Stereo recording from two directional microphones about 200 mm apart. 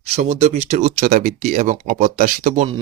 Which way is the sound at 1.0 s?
45° right (ahead or behind).